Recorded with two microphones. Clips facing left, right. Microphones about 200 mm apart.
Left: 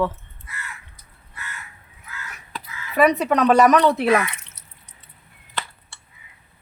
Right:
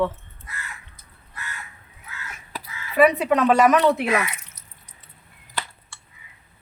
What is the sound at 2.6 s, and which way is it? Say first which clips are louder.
Speech: right 1 dB; 40° left (ahead or behind).